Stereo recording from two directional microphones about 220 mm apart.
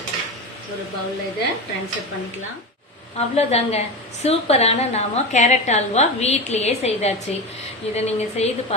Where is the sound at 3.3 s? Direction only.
30° left (ahead or behind).